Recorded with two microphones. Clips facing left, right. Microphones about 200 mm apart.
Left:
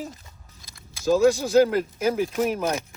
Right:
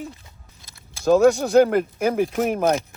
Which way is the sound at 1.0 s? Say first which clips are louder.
Right 3 dB; 60° right (ahead or behind).